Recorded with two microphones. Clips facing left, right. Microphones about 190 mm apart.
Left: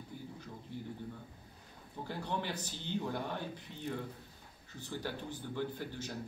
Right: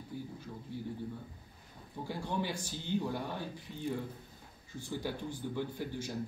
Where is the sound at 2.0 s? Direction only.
10° right (ahead or behind).